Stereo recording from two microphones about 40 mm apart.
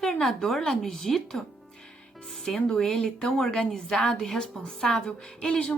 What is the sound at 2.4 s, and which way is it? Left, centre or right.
Speech, centre.